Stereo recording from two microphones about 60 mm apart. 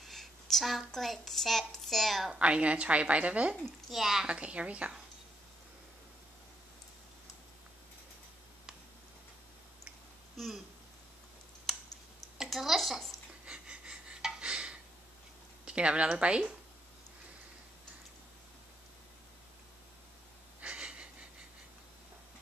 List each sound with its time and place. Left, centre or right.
0.0 s speech: centre
2.3 s a woman's voice: centre
3.9 s a woman's voice: centre
4.3 s a woman's voice: right
11.7 s a sound: centre
13.5 s wheeze: centre
14.4 s a sound: centre
15.6 s speech: centre
20.6 s wheeze: right